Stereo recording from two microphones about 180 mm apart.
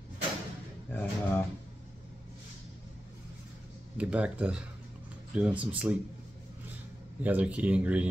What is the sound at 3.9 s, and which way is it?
Speech, 5° right (ahead or behind).